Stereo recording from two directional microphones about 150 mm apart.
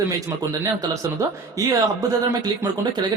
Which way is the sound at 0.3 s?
20° right (ahead or behind).